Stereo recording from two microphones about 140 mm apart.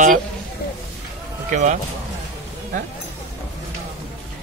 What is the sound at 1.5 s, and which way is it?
Speech, 60° right (ahead or behind).